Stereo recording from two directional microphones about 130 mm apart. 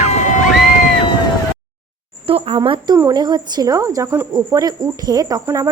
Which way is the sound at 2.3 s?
45° right (ahead or behind).